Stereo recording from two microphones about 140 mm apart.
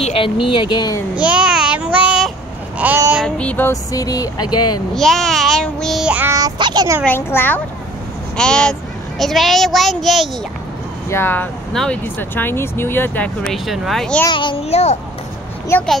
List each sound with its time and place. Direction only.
0.0 s speech: 40° left (ahead or behind)
1.1 s child singing: 10° right (ahead or behind)
3.3 s speech: 10° left (ahead or behind)
3.9 s speech: 25° left (ahead or behind)
4.9 s child singing: centre (ahead or behind)
6.3 s a child's voice: 30° right (ahead or behind)
7.1 s speech: 15° left (ahead or behind)
8.4 s child singing: 5° left (ahead or behind)
11.1 s speech: 15° left (ahead or behind)
11.7 s child singing: 5° left (ahead or behind)
12.0 s speech: 15° left (ahead or behind)
14.3 s a child's voice: 35° left (ahead or behind)
15.7 s speech: 15° left (ahead or behind)